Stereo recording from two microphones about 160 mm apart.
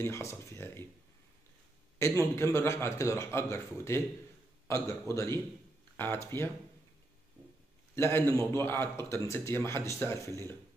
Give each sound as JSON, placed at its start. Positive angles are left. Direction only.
{"t": 0.0, "sound": "speech", "side_deg": 15}
{"t": 2.0, "sound": "a man's voice", "side_deg": 20}
{"t": 7.9, "sound": "speech", "side_deg": 15}